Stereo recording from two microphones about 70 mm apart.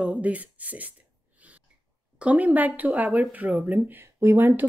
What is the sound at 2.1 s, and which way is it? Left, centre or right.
Speech, centre.